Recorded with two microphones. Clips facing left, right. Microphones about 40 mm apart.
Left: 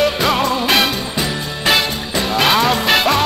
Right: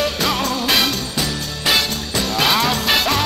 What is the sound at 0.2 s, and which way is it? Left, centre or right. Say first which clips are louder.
Music: left 4 dB; centre.